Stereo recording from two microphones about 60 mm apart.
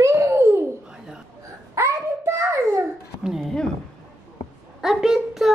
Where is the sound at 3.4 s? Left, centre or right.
Centre.